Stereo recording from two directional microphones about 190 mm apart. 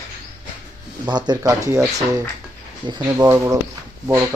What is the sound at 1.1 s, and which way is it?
Speech, 20° right (ahead or behind).